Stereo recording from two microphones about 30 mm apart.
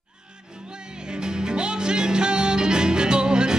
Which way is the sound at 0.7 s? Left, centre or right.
Right.